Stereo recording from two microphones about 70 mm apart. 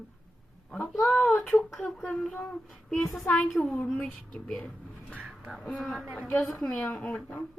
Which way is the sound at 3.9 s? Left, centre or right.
Centre.